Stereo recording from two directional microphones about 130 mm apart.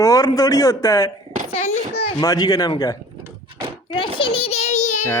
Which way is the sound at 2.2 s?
25° left (ahead or behind).